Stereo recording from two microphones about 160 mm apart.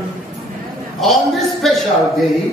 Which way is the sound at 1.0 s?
Centre (ahead or behind).